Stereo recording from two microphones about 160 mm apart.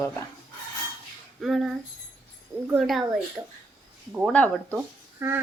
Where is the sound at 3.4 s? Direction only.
15° right (ahead or behind).